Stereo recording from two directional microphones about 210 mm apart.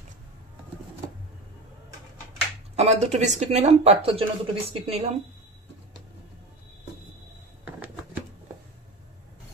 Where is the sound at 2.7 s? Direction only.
30° right (ahead or behind).